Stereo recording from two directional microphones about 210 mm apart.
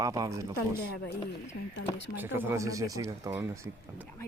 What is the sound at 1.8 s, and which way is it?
Speech, 60° left (ahead or behind).